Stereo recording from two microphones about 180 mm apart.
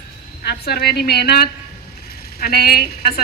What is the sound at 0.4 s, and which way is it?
A woman's voice, 60° left (ahead or behind).